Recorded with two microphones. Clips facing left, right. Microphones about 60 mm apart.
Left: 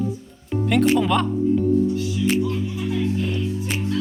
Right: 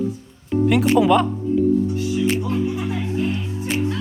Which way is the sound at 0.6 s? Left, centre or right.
Centre.